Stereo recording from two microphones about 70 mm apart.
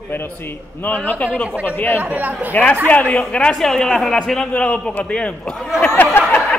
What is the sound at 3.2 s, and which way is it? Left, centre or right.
A man's voice, centre.